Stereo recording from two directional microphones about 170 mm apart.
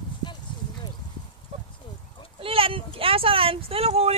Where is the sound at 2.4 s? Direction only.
35° right (ahead or behind).